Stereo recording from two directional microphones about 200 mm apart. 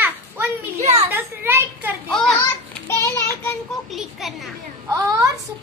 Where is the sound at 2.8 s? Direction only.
15° left (ahead or behind).